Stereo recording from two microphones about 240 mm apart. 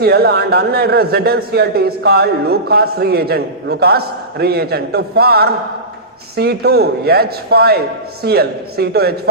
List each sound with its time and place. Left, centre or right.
0.0 s a man's voice: right